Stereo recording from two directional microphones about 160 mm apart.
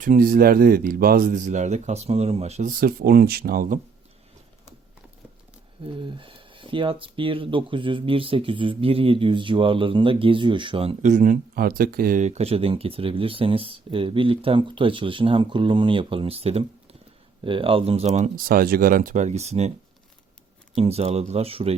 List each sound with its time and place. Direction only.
0.0 s speech: 60° right (ahead or behind)
5.8 s speech: 30° right (ahead or behind)
11.0 s speech: 50° right (ahead or behind)
12.2 s speech: 40° right (ahead or behind)
18.3 s speech: 65° right (ahead or behind); by 19.7 s 45° right (ahead or behind)
20.7 s speech: 40° right (ahead or behind)